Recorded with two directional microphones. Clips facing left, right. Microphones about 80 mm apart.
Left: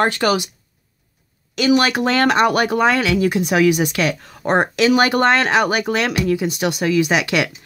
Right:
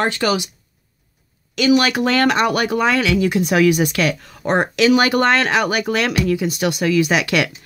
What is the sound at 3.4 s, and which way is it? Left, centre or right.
Speech, centre.